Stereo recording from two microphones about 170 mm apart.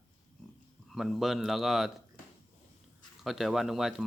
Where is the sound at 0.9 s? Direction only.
Centre (ahead or behind).